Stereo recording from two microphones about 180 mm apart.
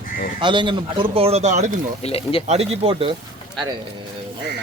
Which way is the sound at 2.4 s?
35° right (ahead or behind).